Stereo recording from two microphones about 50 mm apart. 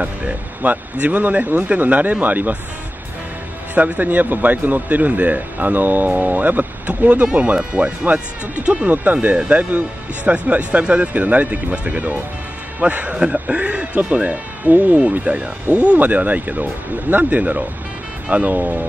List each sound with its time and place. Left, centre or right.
0.0 s speech: right
3.7 s speech: right
7.5 s speech: centre
15.0 s speech: right
16.0 s speech: right